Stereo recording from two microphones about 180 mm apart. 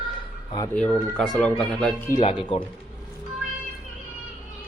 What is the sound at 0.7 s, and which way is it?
Speech, 5° left (ahead or behind).